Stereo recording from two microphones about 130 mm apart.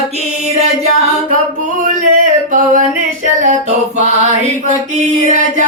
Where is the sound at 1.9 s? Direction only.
80° right.